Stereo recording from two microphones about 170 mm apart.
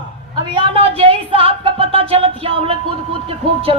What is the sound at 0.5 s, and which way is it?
Speech, 30° right (ahead or behind).